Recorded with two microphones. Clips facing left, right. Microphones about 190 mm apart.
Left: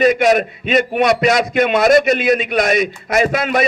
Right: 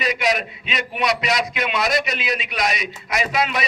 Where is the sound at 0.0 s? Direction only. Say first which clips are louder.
Left 10 dB; 50° left (ahead or behind).